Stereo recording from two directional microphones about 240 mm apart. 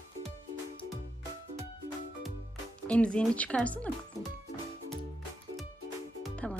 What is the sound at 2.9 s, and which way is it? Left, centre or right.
Speech, centre.